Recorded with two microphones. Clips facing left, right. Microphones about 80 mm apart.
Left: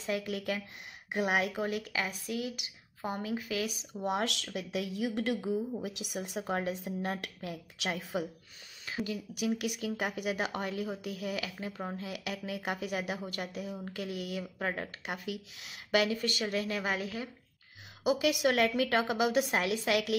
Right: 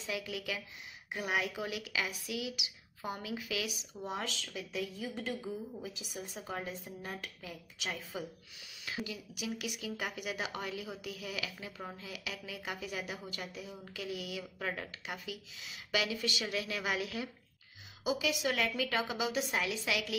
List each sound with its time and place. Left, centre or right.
0.0 s a woman's voice: left
4.0 s a woman's voice: left
11.6 s speech: left
12.0 s a woman's voice: left
14.6 s speech: left
15.0 s a woman's voice: left
18.0 s a woman's voice: left